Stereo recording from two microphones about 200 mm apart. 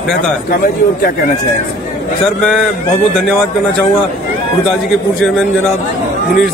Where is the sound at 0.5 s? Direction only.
45° left (ahead or behind).